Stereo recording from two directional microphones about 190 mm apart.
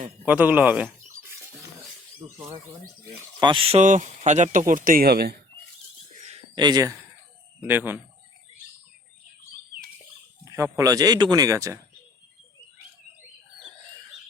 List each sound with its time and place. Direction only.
0.3 s speech: 10° right (ahead or behind)
3.4 s speech: 25° right (ahead or behind); by 5.4 s 55° right (ahead or behind)
6.6 s speech: 20° right (ahead or behind)
7.7 s speech: 10° right (ahead or behind)
10.4 s speech: 15° right (ahead or behind)